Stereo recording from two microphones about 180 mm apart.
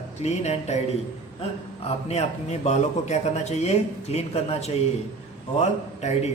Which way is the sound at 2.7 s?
40° left (ahead or behind).